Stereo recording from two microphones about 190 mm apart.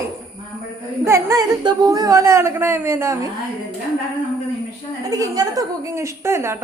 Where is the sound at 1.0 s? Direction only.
15° right (ahead or behind).